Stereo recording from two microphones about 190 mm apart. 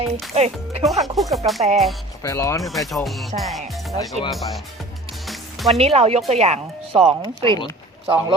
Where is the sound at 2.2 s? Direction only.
15° left (ahead or behind).